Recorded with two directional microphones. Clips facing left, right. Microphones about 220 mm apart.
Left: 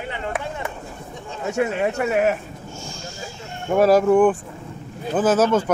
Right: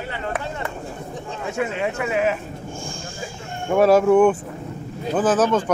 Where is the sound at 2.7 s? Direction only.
50° right (ahead or behind).